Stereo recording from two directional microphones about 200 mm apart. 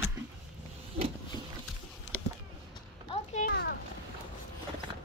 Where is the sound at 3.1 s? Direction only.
35° left (ahead or behind).